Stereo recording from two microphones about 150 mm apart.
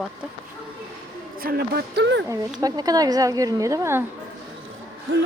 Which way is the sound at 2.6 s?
25° right (ahead or behind).